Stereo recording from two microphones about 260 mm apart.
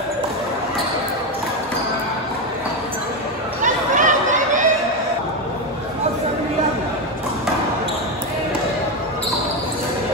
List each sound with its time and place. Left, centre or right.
3.6 s chatter: right